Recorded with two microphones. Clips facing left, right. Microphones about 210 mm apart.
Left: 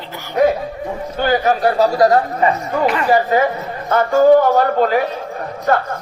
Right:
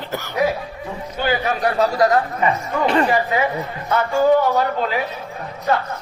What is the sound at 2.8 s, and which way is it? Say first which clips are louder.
Speech: right 1 dB; 30° right (ahead or behind).